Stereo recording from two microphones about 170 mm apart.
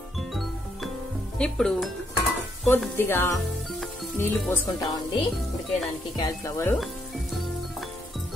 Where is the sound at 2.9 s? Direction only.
15° left (ahead or behind).